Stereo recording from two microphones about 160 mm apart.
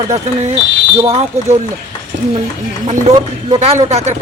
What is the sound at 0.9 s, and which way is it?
Speech, 30° right (ahead or behind).